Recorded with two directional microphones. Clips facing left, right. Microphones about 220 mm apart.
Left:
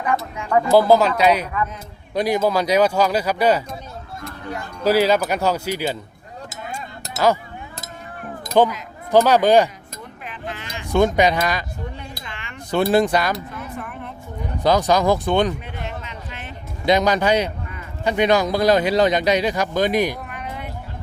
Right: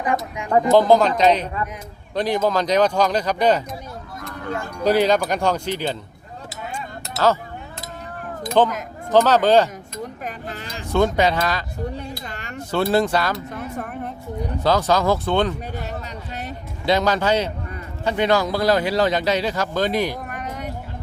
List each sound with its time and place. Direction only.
0.0 s speech: 15° right (ahead or behind)
0.7 s speech: 10° left (ahead or behind)
4.8 s speech: 5° left (ahead or behind)
8.6 s speech: 10° left (ahead or behind)
10.0 s sheep: 40° right (ahead or behind)
10.9 s speech: 15° left (ahead or behind)
11.9 s a sound: 40° right (ahead or behind)
12.7 s speech: 15° left (ahead or behind)
13.5 s a sound: 40° right (ahead or behind)
14.6 s speech: 15° left (ahead or behind)
15.6 s music: 40° right (ahead or behind)
16.8 s speech: 15° left (ahead or behind)
20.2 s a sound: 45° right (ahead or behind)